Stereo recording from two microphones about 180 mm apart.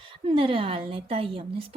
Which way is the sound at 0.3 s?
30° right (ahead or behind).